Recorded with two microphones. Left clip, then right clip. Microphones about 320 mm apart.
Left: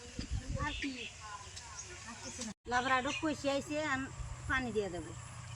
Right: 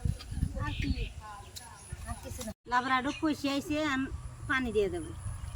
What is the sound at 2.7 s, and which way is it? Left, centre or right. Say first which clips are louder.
Speech: right 3 dB; centre.